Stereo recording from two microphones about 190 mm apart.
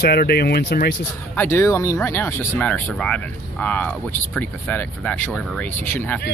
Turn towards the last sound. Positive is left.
turn(degrees=10)  # may be behind; listen again after turning